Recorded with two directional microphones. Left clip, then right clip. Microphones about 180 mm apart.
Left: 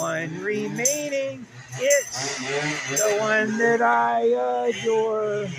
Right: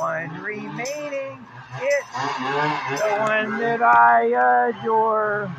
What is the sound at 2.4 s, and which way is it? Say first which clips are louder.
Speech: right 4 dB; 35° left (ahead or behind).